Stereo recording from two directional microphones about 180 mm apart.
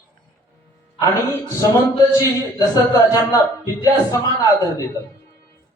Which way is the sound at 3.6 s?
20° left (ahead or behind).